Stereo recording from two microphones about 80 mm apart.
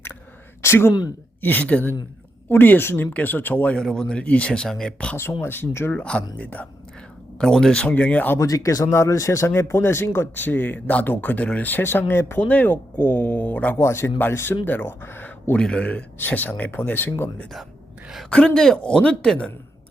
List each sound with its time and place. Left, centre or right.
0.6 s speech: left
1.4 s speech: left
3.8 s speech: centre
5.4 s speech: left
7.3 s speech: centre
8.4 s speech: left; by 13.7 s centre
13.7 s speech: left
15.5 s speech: centre